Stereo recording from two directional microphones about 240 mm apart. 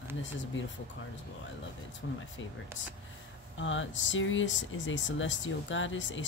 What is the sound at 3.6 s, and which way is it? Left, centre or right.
Speech, left.